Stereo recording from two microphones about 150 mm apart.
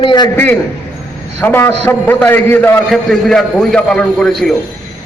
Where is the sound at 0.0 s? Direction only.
35° left (ahead or behind).